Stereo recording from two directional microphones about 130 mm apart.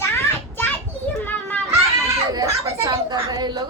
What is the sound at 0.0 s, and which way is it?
Children playing, 15° left (ahead or behind).